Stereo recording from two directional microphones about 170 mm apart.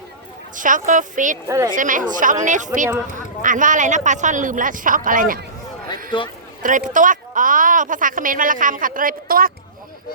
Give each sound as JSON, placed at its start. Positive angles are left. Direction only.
{"t": 0.5, "sound": "a woman's voice", "side_deg": -50}
{"t": 1.5, "sound": "a woman's voice", "side_deg": -15}
{"t": 1.7, "sound": "a woman's voice", "side_deg": -50}
{"t": 6.1, "sound": "speech", "side_deg": 30}
{"t": 6.6, "sound": "a woman's voice", "side_deg": -50}